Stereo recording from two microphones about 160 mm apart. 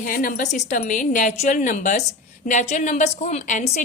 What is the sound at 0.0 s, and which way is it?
A woman's voice, 60° left (ahead or behind).